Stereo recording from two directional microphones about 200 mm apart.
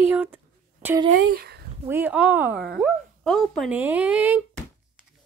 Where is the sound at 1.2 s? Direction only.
50° right (ahead or behind).